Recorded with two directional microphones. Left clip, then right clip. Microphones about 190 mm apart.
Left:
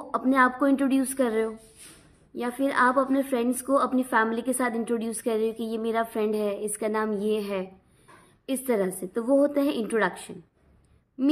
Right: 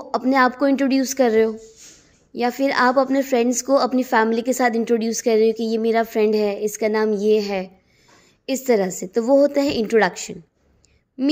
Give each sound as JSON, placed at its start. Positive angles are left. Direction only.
{"t": 0.0, "sound": "a woman's voice", "side_deg": -30}